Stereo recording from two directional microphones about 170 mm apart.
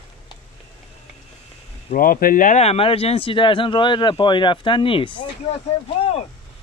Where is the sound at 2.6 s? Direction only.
35° left (ahead or behind).